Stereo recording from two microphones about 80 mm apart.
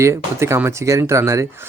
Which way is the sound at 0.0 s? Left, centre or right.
Right.